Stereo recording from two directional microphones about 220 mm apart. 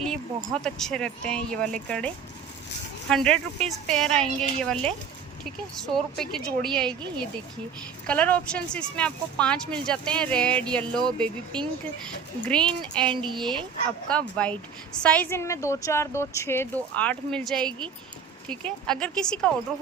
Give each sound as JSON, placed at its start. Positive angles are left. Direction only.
{"t": 0.0, "sound": "speech", "side_deg": 0}
{"t": 8.0, "sound": "speech", "side_deg": 5}
{"t": 13.2, "sound": "speech", "side_deg": -20}
{"t": 14.1, "sound": "a woman's voice", "side_deg": 5}